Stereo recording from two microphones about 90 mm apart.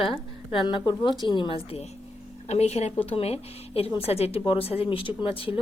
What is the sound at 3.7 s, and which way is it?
Speech, 90° left.